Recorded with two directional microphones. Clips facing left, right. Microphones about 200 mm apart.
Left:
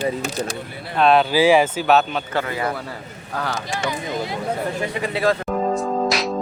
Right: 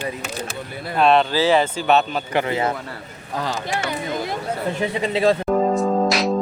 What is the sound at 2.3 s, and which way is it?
Speech, 20° right (ahead or behind).